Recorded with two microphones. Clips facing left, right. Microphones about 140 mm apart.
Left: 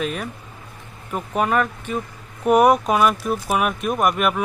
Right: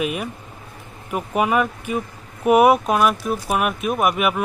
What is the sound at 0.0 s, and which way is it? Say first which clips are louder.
Speech: right 2 dB; 10° right (ahead or behind).